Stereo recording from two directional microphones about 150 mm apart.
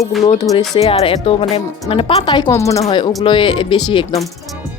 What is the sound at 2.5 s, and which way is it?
Speech, 20° left (ahead or behind).